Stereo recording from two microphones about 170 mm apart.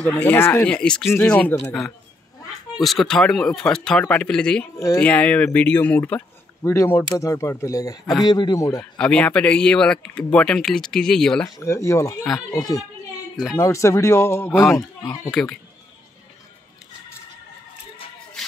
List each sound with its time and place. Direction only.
0.0 s speech: 10° left (ahead or behind)
2.8 s speech: centre (ahead or behind)
4.7 s speech: 20° left (ahead or behind)
5.0 s speech: 5° left (ahead or behind)
8.9 s speech: 5° left (ahead or behind)
11.4 s speech: 20° left (ahead or behind)